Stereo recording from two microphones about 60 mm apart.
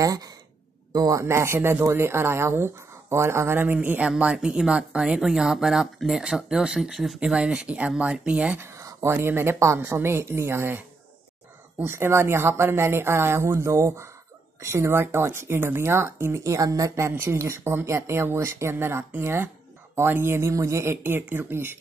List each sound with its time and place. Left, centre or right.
0.0 s speech: right
0.9 s speech: right
1.2 s speech: right
3.5 s speech: right
4.2 s speech: centre
7.3 s speech: centre
8.6 s a sound: right
9.1 s speech: right
11.8 s speech: right
17.1 s speech: right